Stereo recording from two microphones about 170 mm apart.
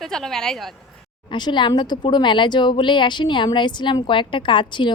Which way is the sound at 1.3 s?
25° left (ahead or behind).